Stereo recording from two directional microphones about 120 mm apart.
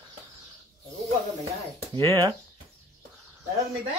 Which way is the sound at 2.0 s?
30° right (ahead or behind).